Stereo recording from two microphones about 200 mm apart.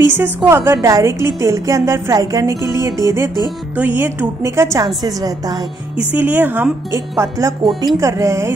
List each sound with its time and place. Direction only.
0.0 s a woman's voice: 10° right (ahead or behind)
5.9 s a woman's voice: 10° right (ahead or behind)